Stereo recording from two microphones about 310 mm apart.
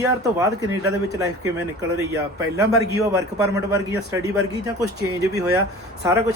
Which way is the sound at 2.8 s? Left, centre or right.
Right.